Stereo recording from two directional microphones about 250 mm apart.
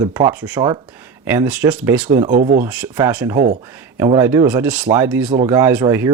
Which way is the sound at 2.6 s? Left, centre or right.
Centre.